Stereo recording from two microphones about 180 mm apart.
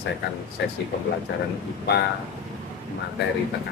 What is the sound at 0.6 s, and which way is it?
Speech, 70° left (ahead or behind).